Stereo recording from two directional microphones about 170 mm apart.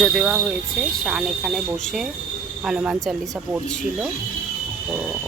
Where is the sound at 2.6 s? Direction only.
5° right (ahead or behind).